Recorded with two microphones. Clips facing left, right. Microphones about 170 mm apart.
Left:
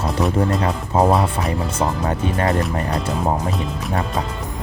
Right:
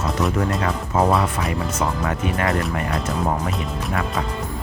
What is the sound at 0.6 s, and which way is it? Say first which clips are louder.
Speech: left 2 dB; 30° left (ahead or behind).